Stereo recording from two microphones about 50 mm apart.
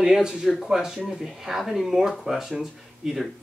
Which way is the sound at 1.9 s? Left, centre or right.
Centre.